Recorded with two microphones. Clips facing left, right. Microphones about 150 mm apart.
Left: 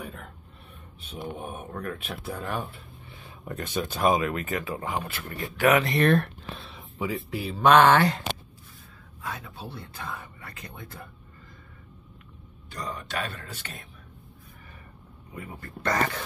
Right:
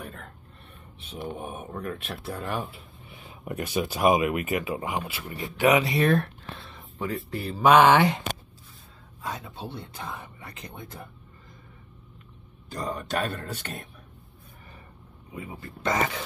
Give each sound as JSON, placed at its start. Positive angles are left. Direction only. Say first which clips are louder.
{"t": 0.0, "sound": "a sound", "louder": "left 1 dB", "side_deg": 0}
{"t": 1.1, "sound": "speech", "louder": "right 1 dB", "side_deg": 0}
{"t": 3.1, "sound": "a sound", "louder": "right 2 dB", "side_deg": -20}
{"t": 3.6, "sound": "speech", "louder": "right 2 dB", "side_deg": -10}
{"t": 9.2, "sound": "speech", "louder": "right 2 dB", "side_deg": -20}
{"t": 12.7, "sound": "a man's voice", "louder": "right 4 dB", "side_deg": -40}
{"t": 13.3, "sound": "a man's voice", "louder": "right 6 dB", "side_deg": -55}
{"t": 15.3, "sound": "speech", "louder": "right 1 dB", "side_deg": -20}
{"t": 15.9, "sound": "speech", "louder": "even", "side_deg": 0}